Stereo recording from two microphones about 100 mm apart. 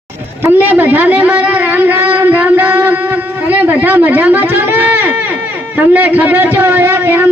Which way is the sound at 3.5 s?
15° right (ahead or behind).